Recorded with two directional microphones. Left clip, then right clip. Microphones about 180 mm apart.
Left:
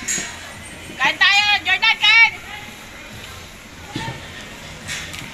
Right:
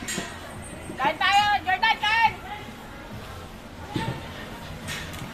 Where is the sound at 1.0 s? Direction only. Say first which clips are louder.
Left 6 dB; 45° right (ahead or behind).